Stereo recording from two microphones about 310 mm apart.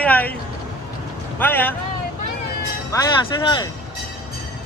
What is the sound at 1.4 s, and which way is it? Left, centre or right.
Speech, centre.